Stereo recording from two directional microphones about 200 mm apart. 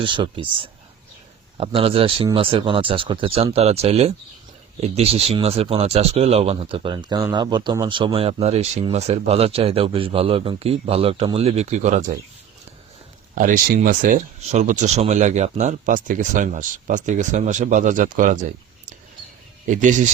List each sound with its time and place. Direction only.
0.0 s speech: 25° right (ahead or behind)
13.3 s speech: 40° right (ahead or behind)
19.6 s speech: 40° right (ahead or behind)